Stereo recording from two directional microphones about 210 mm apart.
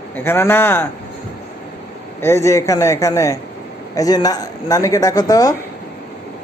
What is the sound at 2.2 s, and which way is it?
Speech, 15° left (ahead or behind).